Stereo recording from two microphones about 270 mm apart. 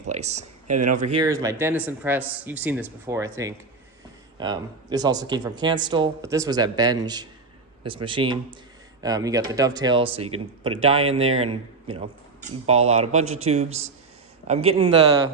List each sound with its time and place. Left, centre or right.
0.1 s speech: right
1.2 s a man's voice: centre